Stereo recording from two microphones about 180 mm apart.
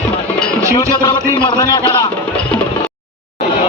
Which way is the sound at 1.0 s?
20° left (ahead or behind).